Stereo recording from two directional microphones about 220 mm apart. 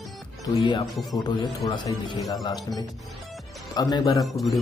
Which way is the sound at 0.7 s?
20° left (ahead or behind).